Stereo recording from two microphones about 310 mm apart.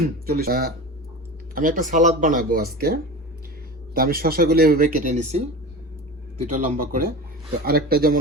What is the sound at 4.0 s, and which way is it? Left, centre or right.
Speech, right.